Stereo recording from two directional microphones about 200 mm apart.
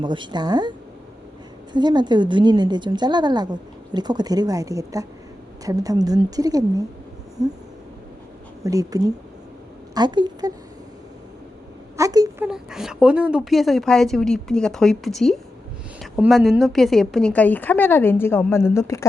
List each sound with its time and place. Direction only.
0.0 s a woman's voice: 25° right (ahead or behind)
1.7 s a woman's voice: 20° right (ahead or behind)
8.6 s a woman's voice: 15° right (ahead or behind)
11.9 s speech: 15° right (ahead or behind)
12.5 s a woman's voice: centre (ahead or behind); by 19.0 s 15° left (ahead or behind)